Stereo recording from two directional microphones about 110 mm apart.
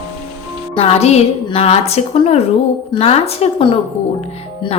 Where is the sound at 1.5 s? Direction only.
65° left (ahead or behind).